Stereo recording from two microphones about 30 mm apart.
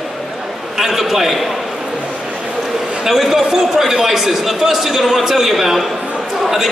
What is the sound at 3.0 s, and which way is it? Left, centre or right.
A man's voice, centre.